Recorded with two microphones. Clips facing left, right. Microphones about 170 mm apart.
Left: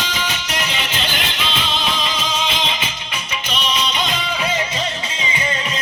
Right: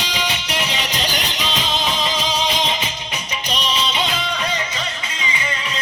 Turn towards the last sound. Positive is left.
turn(degrees=-30)  # may be behind; listen again after turning